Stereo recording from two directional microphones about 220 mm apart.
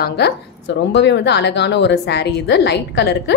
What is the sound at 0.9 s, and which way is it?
A woman's voice, 50° left (ahead or behind).